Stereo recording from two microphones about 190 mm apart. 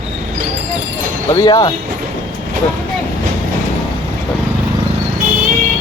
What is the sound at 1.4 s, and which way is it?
Speech, 20° left (ahead or behind).